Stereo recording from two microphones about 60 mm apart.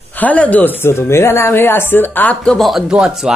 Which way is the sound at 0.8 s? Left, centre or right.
Left.